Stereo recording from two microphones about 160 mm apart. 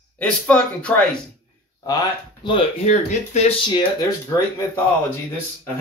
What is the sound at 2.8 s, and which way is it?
Speech, 45° left (ahead or behind).